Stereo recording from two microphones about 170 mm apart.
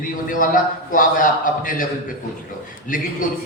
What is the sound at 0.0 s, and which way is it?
A man's voice, 55° left (ahead or behind).